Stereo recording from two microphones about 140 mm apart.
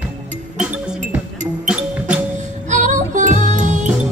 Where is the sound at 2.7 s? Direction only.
60° right (ahead or behind).